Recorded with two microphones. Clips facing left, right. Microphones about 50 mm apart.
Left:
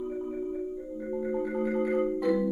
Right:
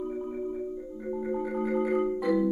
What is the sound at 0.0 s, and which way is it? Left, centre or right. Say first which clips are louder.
Marimba: even; centre.